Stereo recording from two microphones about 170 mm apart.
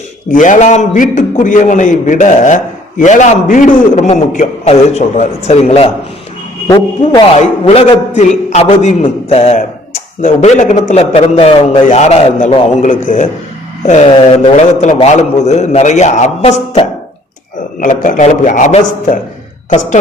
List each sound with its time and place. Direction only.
0.3 s a man's voice: 50° left (ahead or behind)
6.7 s a man's voice: 20° left (ahead or behind)
7.3 s a man's voice: 35° left (ahead or behind)
11.9 s a man's voice: 40° left (ahead or behind)